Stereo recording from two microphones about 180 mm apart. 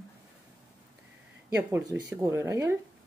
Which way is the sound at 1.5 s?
10° right (ahead or behind).